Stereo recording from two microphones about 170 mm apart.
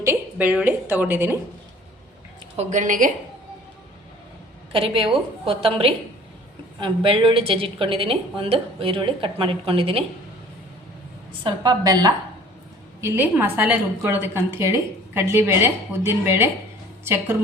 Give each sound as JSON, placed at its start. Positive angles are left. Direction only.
{"t": 0.0, "sound": "a woman's voice", "side_deg": -15}
{"t": 2.6, "sound": "a woman's voice", "side_deg": -45}
{"t": 4.7, "sound": "a woman's voice", "side_deg": -30}
{"t": 11.4, "sound": "a woman's voice", "side_deg": -25}